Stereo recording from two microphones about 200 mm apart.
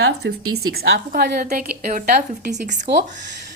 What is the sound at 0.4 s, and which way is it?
Speech, 90° right.